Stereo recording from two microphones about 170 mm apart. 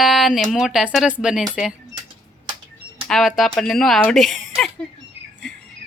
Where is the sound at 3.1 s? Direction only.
Centre (ahead or behind).